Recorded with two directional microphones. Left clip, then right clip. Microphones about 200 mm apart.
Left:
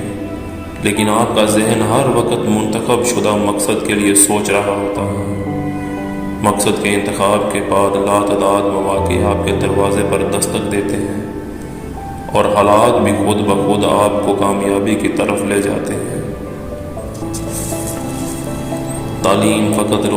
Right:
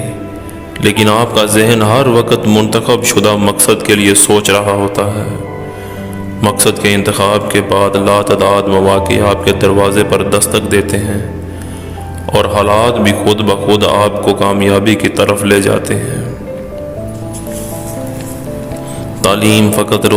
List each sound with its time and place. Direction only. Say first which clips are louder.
0.8 s a man's voice: right 5 dB; 45° right (ahead or behind)
6.4 s a man's voice: right 3 dB; 45° right (ahead or behind)
12.3 s a man's voice: right 1 dB; 45° right (ahead or behind)
19.2 s a man's voice: right 3 dB; 45° right (ahead or behind)